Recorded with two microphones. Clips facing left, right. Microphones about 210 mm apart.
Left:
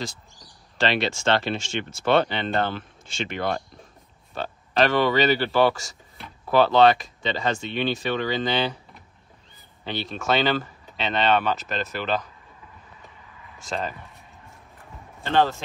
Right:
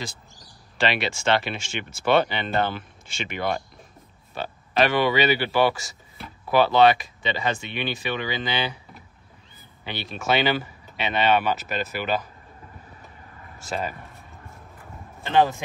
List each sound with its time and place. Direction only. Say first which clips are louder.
0.7 s speech: left 1 dB; 5° right (ahead or behind)
13.6 s a sound: even; 5° right (ahead or behind)
15.2 s speech: right 1 dB; 15° right (ahead or behind)